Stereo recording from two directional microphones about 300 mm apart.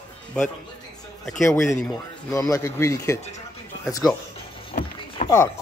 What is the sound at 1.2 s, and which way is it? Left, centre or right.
Speech, centre.